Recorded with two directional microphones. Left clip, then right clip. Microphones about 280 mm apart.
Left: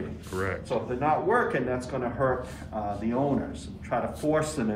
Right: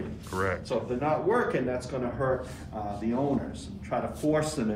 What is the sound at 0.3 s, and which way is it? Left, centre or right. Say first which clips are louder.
A man's voice: right 1 dB; centre.